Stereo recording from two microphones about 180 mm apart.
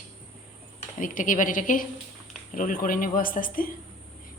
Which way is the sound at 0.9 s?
45° left (ahead or behind).